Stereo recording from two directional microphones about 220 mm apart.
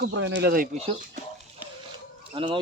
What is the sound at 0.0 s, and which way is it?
Speech, 55° right (ahead or behind).